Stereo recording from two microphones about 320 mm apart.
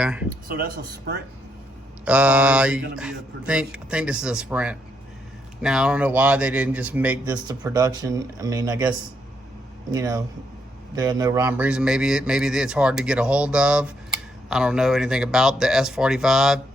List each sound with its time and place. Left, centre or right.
0.0 s speech: centre
0.4 s a man's voice: right
2.0 s speech: centre